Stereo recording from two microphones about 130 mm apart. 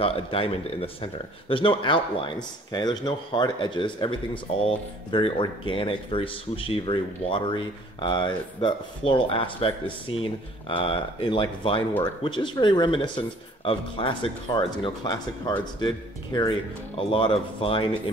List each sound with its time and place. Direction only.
0.0 s a man's voice: 50° left (ahead or behind)
16.9 s speech: 45° left (ahead or behind)